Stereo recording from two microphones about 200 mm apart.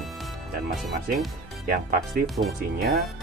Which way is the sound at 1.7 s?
45° right (ahead or behind).